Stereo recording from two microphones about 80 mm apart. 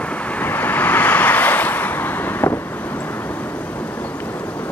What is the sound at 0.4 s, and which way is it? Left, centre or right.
Waves, left.